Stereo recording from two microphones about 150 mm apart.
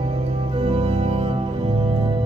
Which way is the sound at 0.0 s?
40° right (ahead or behind).